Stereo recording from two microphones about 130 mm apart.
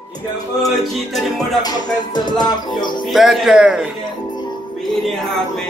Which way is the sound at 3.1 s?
5° right (ahead or behind).